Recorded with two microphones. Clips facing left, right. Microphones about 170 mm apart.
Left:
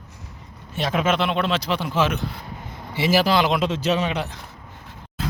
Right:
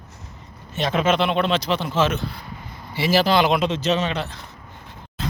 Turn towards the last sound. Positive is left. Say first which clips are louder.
# even
turn(degrees=5)  # may be behind; listen again after turning